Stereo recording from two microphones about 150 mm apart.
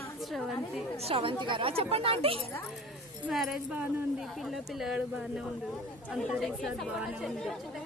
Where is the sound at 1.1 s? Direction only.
40° right (ahead or behind).